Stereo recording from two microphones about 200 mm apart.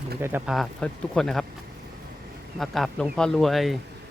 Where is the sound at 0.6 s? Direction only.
5° left (ahead or behind).